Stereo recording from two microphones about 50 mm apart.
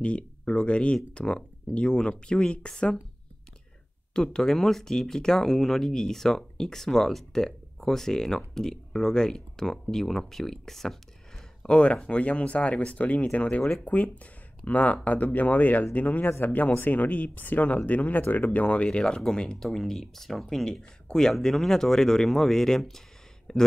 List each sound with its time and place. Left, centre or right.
0.0 s speech: left
4.1 s speech: centre
11.6 s speech: left